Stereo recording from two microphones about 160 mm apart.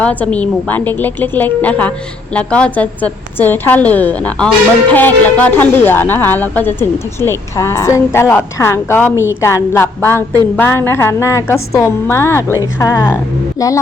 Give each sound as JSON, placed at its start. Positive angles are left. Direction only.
{"t": 0.0, "sound": "speech", "side_deg": 10}